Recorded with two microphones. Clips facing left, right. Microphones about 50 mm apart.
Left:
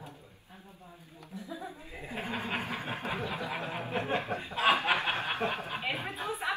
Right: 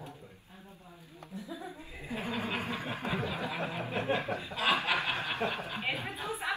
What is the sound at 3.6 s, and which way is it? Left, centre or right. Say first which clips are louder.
Chuckle: right 1 dB; left.